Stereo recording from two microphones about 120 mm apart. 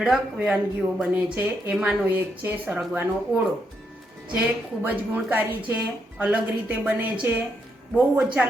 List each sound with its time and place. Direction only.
0.0 s a woman's voice: 5° right (ahead or behind)
4.8 s a woman's voice: 15° right (ahead or behind)